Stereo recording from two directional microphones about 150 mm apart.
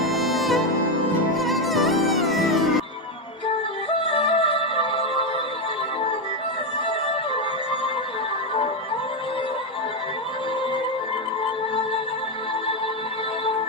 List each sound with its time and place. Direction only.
0.1 s music: centre (ahead or behind)
4.1 s music: 40° left (ahead or behind)